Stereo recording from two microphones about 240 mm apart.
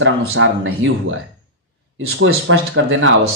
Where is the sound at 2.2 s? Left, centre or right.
Right.